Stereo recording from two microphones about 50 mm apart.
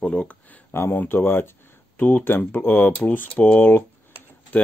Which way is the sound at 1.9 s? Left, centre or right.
Left.